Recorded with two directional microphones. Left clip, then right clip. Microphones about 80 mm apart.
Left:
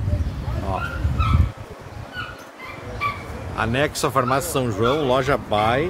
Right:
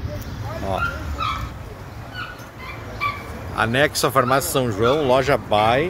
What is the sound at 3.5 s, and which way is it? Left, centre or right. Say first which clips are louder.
A man's voice: right 3 dB; right.